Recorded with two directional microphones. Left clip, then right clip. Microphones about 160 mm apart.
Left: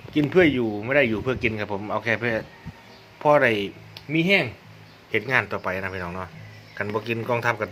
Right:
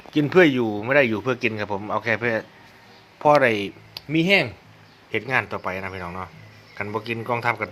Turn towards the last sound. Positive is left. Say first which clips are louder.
# even
turn(degrees=-15)  # may be behind; listen again after turning